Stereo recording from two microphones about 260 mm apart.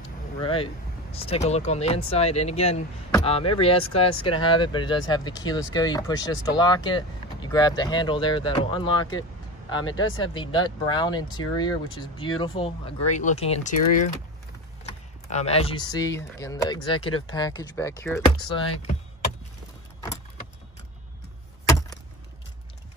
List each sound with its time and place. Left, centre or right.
0.4 s speech: left
21.6 s chop: centre